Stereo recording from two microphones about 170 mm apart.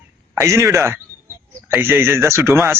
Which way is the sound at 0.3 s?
15° right (ahead or behind).